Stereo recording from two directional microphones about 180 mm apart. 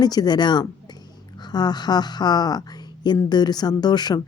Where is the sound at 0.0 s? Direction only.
20° left (ahead or behind).